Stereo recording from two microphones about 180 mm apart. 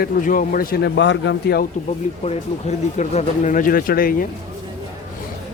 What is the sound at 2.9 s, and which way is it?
Speech, 40° left (ahead or behind).